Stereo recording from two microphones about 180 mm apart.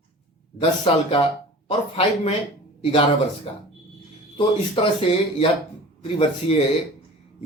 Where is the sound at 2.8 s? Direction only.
30° left (ahead or behind).